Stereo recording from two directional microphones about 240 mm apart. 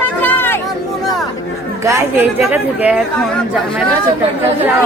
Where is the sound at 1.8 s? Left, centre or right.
Centre.